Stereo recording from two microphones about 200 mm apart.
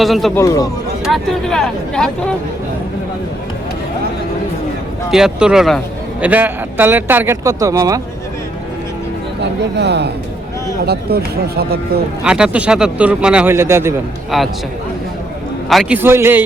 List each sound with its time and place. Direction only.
0.0 s speech: centre (ahead or behind)
0.3 s speech: 15° left (ahead or behind)
1.0 s speech: centre (ahead or behind)
5.1 s a man's voice: 5° right (ahead or behind)
9.4 s speech: 55° right (ahead or behind)
11.1 s speech: 50° right (ahead or behind)
12.2 s a man's voice: 5° right (ahead or behind)
14.3 s speech: centre (ahead or behind)
15.7 s speech: centre (ahead or behind)
16.0 s a man's voice: 10° right (ahead or behind)